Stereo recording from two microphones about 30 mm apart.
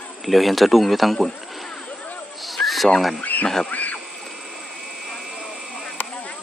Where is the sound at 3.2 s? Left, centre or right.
Left.